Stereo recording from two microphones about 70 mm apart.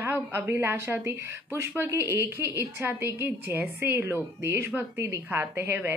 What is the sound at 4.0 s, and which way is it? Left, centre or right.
Speech, right.